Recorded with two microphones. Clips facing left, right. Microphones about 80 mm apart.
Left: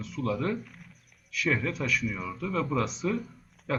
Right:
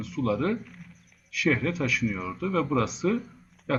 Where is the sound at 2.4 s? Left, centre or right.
Right.